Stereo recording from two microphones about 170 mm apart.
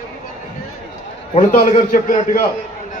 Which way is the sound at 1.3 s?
40° left (ahead or behind).